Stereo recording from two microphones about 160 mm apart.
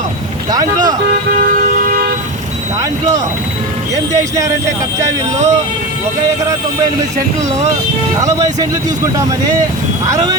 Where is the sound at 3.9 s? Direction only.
20° right (ahead or behind).